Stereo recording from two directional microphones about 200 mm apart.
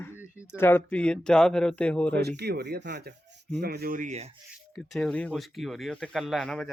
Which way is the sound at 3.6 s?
55° right (ahead or behind).